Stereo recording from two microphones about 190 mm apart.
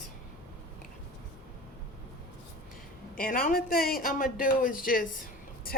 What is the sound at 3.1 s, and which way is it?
A man's voice, 50° left (ahead or behind).